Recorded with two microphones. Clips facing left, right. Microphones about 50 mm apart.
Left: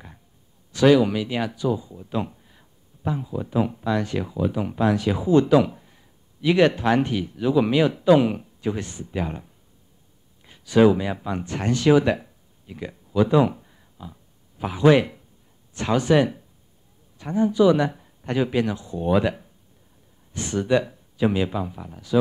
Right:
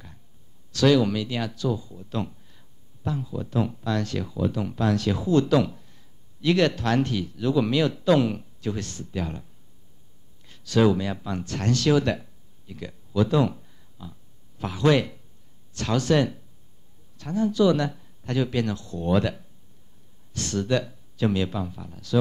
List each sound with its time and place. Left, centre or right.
0.7 s speech: centre